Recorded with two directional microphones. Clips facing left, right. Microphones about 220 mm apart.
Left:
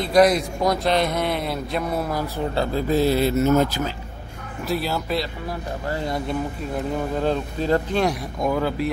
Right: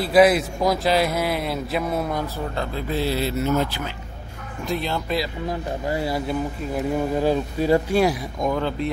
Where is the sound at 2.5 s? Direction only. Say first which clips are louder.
Left 6 dB; 40° left (ahead or behind).